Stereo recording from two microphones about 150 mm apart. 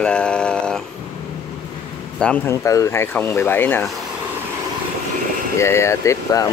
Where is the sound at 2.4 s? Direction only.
20° left (ahead or behind).